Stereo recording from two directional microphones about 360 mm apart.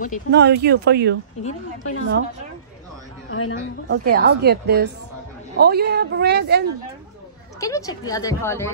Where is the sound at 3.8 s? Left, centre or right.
Right.